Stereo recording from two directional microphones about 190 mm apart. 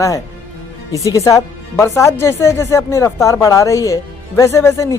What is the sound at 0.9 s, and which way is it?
Speech, 20° left (ahead or behind).